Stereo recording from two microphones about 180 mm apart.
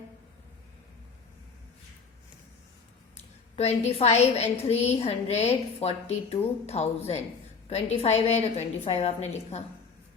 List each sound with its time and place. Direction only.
3.2 s a woman's voice: 35° left (ahead or behind)